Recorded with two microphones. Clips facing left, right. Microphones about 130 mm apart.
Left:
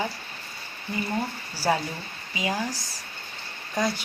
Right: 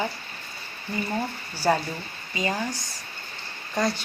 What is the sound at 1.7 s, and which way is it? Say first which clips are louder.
Speech: right 2 dB; 5° left (ahead or behind).